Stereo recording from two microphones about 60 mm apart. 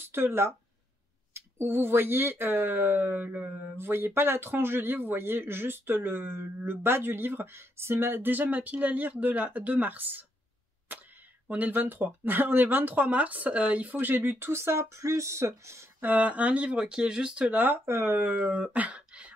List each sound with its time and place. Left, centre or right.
0.1 s speech: right
11.4 s speech: right
16.0 s speech: right
17.8 s speech: right; by 19.3 s centre